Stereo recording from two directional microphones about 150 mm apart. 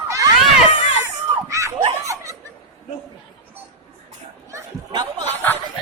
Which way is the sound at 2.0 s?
20° right (ahead or behind).